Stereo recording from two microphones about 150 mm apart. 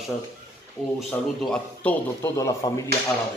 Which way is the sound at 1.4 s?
5° left (ahead or behind).